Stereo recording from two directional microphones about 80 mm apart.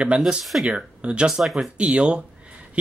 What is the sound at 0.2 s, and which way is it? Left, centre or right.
Speech, centre.